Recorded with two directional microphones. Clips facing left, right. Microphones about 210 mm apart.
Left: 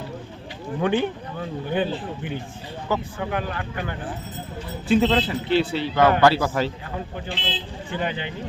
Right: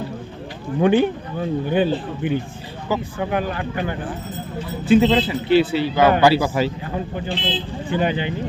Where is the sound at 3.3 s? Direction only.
20° right (ahead or behind).